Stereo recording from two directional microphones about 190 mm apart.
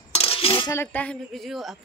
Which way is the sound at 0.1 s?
30° left (ahead or behind).